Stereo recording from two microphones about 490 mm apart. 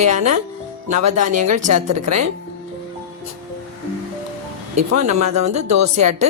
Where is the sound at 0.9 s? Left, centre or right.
Right.